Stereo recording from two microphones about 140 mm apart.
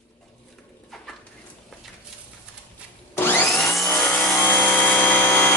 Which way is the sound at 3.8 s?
20° left (ahead or behind).